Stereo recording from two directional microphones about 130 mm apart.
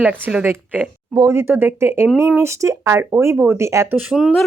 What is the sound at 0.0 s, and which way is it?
Speech, 10° right (ahead or behind).